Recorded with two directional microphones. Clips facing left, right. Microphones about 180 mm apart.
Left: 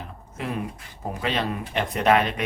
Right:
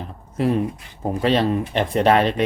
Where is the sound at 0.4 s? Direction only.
35° right (ahead or behind).